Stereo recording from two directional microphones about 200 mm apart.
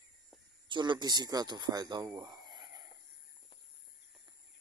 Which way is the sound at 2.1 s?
20° right (ahead or behind).